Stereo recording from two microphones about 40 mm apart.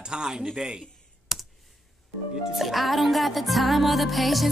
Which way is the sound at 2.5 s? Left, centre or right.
Centre.